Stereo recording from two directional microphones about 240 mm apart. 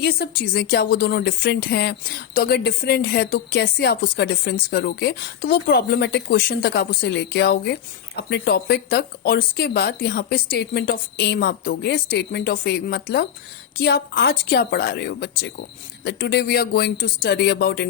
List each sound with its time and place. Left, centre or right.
0.0 s speech: left